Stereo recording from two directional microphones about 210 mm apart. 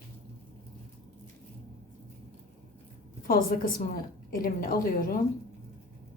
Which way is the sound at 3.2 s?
45° left (ahead or behind).